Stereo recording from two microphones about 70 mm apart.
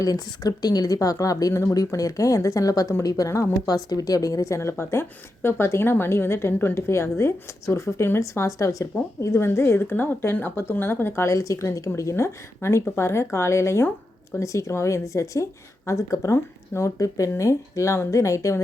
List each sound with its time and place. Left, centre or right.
0.0 s a woman's voice: left
3.8 s a woman's voice: left
8.2 s a woman's voice: left